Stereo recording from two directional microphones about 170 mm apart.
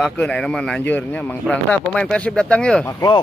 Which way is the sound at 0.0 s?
5° left (ahead or behind).